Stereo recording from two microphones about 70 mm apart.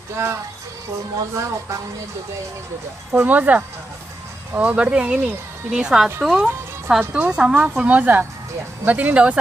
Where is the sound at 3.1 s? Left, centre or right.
Right; by 6.4 s centre.